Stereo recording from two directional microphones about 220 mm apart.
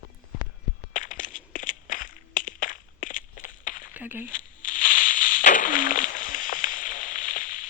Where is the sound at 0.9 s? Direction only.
35° left (ahead or behind).